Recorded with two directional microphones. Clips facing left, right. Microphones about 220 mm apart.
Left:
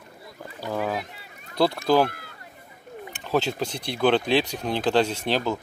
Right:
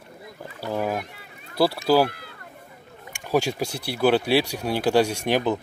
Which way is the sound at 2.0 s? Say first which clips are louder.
Right 1 dB; 45° left (ahead or behind).